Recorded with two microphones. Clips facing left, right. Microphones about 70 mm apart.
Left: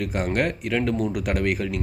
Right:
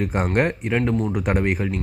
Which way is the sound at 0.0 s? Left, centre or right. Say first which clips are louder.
Right 3 dB; right.